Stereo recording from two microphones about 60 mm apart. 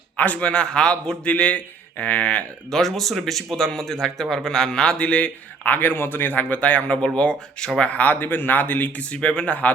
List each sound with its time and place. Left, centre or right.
0.2 s a man's voice: left
2.6 s speech: centre
7.8 s a man's voice: left